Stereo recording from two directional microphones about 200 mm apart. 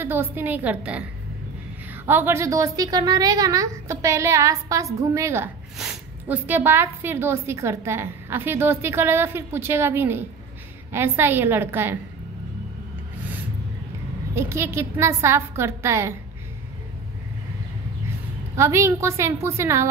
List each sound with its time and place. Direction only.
0.0 s a woman's voice: 10° right (ahead or behind)
2.0 s a woman's voice: 10° right (ahead or behind)
14.3 s a woman's voice: 15° right (ahead or behind)
18.6 s a woman's voice: 15° right (ahead or behind)